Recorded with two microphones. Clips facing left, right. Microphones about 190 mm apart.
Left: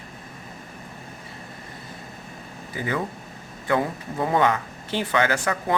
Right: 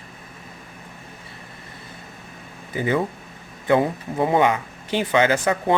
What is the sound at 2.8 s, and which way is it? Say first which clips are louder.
Speech: right 5 dB; 20° right (ahead or behind).